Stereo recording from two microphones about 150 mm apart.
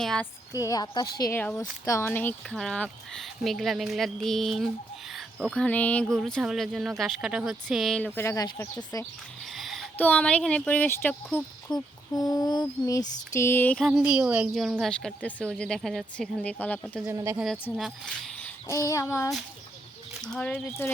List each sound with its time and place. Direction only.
0.0 s a woman's voice: 5° left (ahead or behind)
0.5 s female singing: 25° left (ahead or behind)
1.3 s a child's voice: 10° left (ahead or behind)
2.5 s a woman's voice: centre (ahead or behind)
8.0 s a child's voice: 15° left (ahead or behind)
9.5 s a sound: centre (ahead or behind)
10.0 s a child's voice: 10° left (ahead or behind)
11.7 s female singing: 25° left (ahead or behind)
13.8 s a woman's voice: 5° right (ahead or behind)
17.1 s speech: 20° right (ahead or behind)
17.3 s a woman's voice: centre (ahead or behind)
18.7 s female singing: 20° left (ahead or behind)
20.2 s a child's voice: 5° left (ahead or behind)